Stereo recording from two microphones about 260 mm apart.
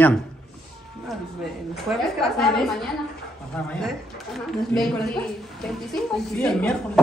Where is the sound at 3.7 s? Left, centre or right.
Centre.